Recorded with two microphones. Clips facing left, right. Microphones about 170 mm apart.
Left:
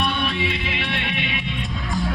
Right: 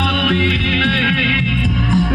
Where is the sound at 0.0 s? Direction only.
65° right (ahead or behind).